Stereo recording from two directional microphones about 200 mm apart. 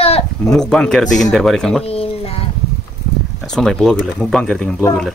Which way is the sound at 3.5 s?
5° left (ahead or behind).